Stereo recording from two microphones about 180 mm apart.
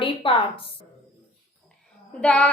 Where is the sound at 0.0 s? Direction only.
30° left (ahead or behind).